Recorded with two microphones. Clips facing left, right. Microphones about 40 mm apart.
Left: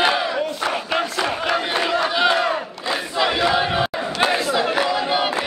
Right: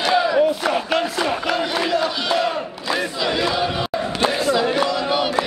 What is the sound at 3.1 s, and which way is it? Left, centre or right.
Crowd, centre.